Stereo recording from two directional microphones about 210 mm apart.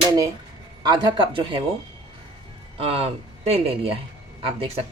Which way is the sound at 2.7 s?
30° right (ahead or behind).